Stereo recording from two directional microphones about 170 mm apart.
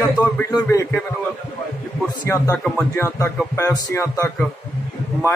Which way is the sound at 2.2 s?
15° left (ahead or behind).